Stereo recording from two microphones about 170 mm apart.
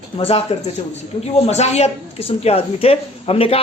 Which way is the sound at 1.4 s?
40° left (ahead or behind).